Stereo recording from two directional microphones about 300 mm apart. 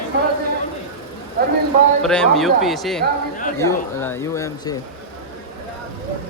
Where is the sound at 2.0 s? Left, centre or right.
Centre.